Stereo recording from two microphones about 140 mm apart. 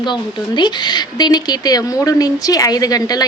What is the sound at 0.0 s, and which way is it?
Speech, 35° left (ahead or behind).